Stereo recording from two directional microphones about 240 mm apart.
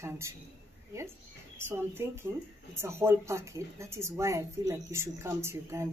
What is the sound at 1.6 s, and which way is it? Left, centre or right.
Speech, centre.